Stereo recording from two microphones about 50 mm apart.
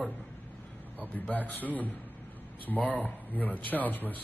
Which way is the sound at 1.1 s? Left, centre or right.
Left.